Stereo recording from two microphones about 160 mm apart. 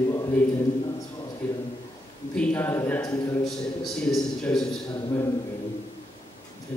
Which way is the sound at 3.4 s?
Centre (ahead or behind).